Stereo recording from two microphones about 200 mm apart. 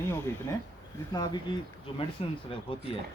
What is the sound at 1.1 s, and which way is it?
Speech, 20° left (ahead or behind).